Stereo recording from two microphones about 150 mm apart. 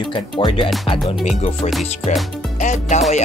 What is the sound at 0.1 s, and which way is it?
Speech, 35° left (ahead or behind).